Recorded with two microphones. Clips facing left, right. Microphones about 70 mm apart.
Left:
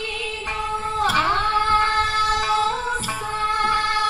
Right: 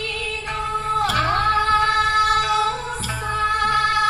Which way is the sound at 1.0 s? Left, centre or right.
Left.